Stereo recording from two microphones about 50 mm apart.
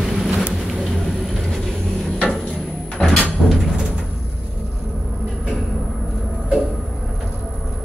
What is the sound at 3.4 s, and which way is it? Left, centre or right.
Music, centre.